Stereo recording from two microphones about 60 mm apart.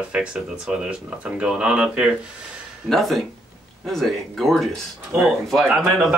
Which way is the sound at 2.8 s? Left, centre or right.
Centre.